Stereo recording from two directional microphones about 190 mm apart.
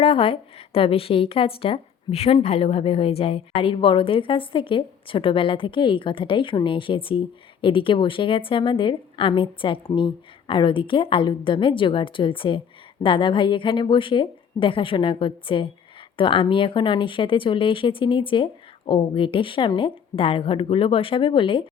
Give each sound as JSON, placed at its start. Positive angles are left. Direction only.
{"t": 0.0, "sound": "speech", "side_deg": 30}